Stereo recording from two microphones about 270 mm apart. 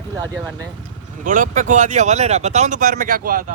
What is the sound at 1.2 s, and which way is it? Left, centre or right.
Speech, right.